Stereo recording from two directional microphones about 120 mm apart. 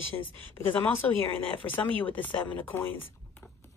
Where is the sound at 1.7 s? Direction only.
15° left (ahead or behind).